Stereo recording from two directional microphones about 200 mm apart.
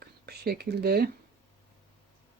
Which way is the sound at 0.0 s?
50° right (ahead or behind).